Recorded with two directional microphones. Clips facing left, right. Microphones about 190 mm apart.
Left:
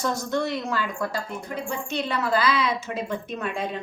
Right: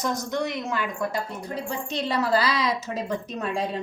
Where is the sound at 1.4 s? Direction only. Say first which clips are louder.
Even; 35° right (ahead or behind).